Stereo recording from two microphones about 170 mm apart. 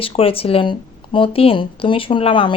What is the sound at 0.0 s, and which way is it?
Speech, 35° left (ahead or behind).